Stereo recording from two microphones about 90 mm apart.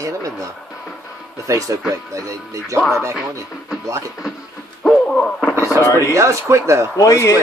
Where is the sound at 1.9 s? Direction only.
35° right (ahead or behind).